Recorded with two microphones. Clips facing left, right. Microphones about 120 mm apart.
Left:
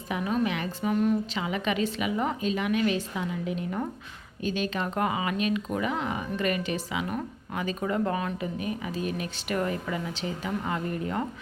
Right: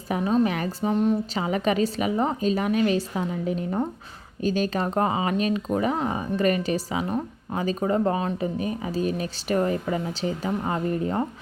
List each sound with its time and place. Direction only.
0.1 s speech: 30° right (ahead or behind)